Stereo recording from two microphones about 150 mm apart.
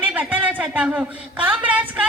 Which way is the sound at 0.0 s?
10° right (ahead or behind).